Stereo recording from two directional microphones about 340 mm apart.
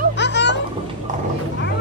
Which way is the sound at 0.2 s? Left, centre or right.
Left.